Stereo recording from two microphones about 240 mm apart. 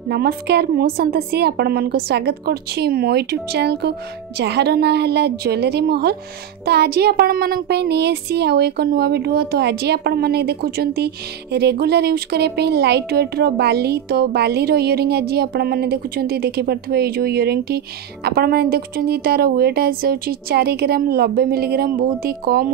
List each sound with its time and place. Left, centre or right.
0.1 s speech: right